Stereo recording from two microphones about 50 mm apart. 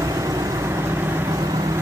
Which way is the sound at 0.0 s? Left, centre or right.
Right.